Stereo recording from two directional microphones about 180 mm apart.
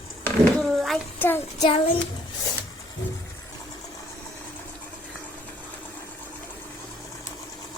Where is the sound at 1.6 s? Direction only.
30° left (ahead or behind).